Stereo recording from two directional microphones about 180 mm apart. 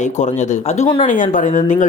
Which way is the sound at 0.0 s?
40° left (ahead or behind).